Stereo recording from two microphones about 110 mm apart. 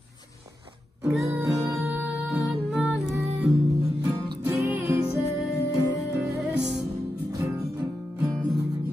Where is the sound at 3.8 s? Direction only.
30° right (ahead or behind).